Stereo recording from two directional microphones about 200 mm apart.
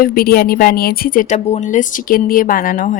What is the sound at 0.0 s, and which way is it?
A woman's voice, 50° left (ahead or behind).